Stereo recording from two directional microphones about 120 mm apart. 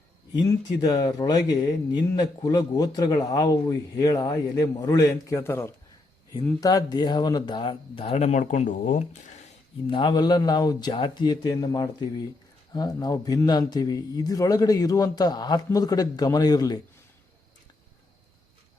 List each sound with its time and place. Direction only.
0.4 s speech: 30° left (ahead or behind)
6.6 s speech: 30° left (ahead or behind); by 9.5 s 75° left (ahead or behind)
9.9 s a man's voice: 40° left (ahead or behind)